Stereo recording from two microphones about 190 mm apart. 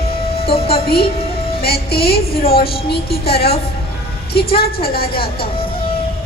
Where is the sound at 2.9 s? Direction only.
55° left (ahead or behind).